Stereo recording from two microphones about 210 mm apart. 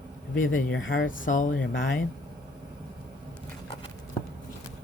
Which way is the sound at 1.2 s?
40° left (ahead or behind).